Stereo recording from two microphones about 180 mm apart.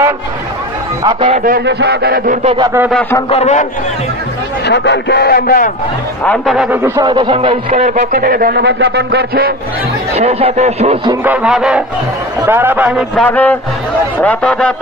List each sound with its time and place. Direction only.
1.0 s speech: 35° right (ahead or behind)
1.4 s a man's voice: 60° right (ahead or behind)
2.4 s a man's voice: 25° right (ahead or behind)
2.9 s a man's voice: 5° left (ahead or behind)
3.3 s a man's voice: 35° left (ahead or behind)
4.6 s speech: 70° left (ahead or behind); by 5.7 s 55° left (ahead or behind)
6.2 s music: centre (ahead or behind)
6.8 s a man's voice: 25° right (ahead or behind); by 8.0 s 40° right (ahead or behind)
8.0 s a man's voice: 55° right (ahead or behind)
10.1 s speech: 35° right (ahead or behind)
11.2 s music: 5° right (ahead or behind)
12.4 s a man's voice: 10° right (ahead or behind)
13.1 s a man's voice: 5° left (ahead or behind)